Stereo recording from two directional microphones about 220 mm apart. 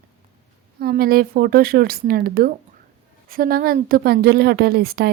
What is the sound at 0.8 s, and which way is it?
A woman's voice, 45° right (ahead or behind).